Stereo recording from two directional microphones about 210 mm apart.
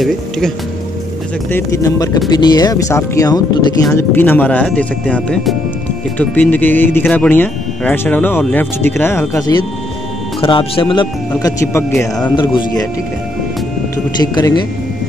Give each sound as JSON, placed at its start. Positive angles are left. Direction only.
{"t": 1.5, "sound": "speech", "side_deg": 15}
{"t": 10.4, "sound": "speech", "side_deg": 25}
{"t": 14.2, "sound": "speech", "side_deg": 20}